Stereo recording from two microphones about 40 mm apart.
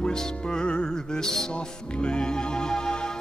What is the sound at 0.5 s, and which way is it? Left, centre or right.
Music, left.